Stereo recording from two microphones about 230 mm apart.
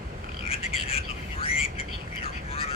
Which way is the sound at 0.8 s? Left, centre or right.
Left.